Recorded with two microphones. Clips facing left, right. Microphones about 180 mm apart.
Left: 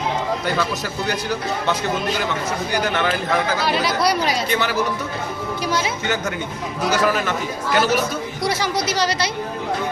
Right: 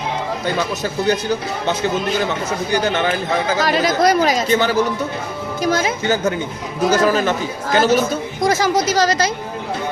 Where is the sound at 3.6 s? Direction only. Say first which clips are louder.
Right 4 dB; 45° right (ahead or behind).